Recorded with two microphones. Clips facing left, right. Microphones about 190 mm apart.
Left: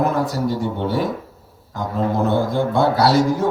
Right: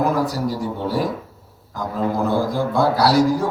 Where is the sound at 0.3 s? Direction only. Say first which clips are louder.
Left 2 dB; 25° left (ahead or behind).